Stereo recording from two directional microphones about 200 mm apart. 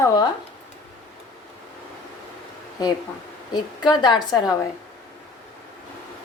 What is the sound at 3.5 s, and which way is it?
Speech, 20° left (ahead or behind).